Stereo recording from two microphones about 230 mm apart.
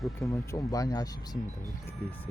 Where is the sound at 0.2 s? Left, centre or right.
Centre.